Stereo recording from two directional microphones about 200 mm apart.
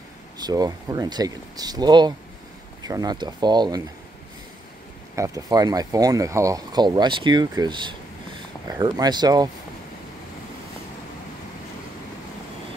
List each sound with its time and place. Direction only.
0.4 s speech: 20° right (ahead or behind)
5.1 s speech: 15° right (ahead or behind)